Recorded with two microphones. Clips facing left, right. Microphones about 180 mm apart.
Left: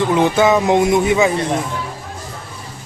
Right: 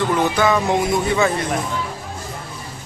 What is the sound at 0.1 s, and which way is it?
Speech, 20° left (ahead or behind).